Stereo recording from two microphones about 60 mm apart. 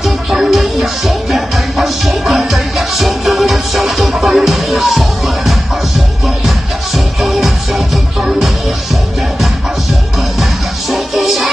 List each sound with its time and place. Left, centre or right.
0.0 s music: centre
7.2 s music: centre
10.4 s music: centre